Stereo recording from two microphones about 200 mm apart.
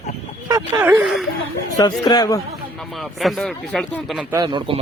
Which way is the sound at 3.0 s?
Centre (ahead or behind).